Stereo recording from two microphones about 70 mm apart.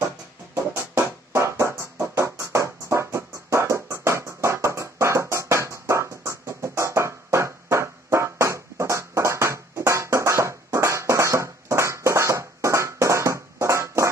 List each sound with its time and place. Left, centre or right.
0.9 s music: right